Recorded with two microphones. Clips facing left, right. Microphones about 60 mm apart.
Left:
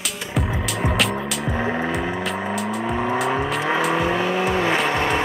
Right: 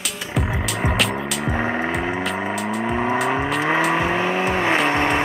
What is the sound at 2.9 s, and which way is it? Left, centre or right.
Vehicle, right.